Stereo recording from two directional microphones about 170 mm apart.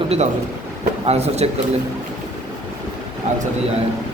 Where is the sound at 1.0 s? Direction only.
40° right (ahead or behind).